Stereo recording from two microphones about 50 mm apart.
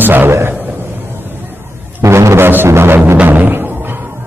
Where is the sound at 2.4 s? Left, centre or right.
Right.